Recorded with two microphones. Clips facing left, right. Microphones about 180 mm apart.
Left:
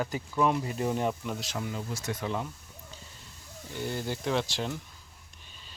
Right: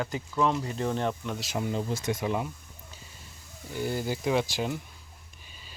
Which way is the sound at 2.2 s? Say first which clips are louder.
Right 1 dB; 10° right (ahead or behind).